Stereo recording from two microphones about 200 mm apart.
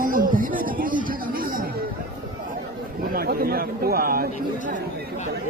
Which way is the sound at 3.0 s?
50° right (ahead or behind).